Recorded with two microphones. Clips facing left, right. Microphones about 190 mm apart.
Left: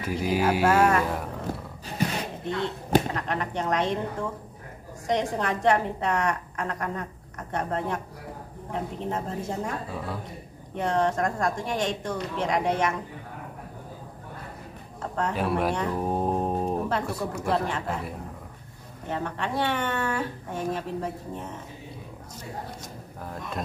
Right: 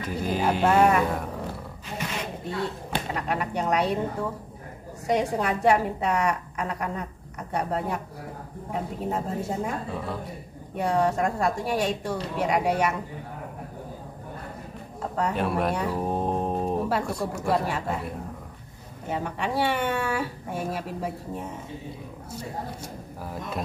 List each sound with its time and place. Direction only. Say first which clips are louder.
0.0 s speech: left 1 dB; 10° left (ahead or behind)
2.0 s a sound: left 7 dB; 35° left (ahead or behind)
3.2 s a woman's voice: right 1 dB; 10° right (ahead or behind)
15.0 s a sound: right 1 dB; 10° right (ahead or behind)
15.3 s a woman's voice: left 2 dB; centre (ahead or behind)
23.2 s speech: right 2 dB; 5° right (ahead or behind)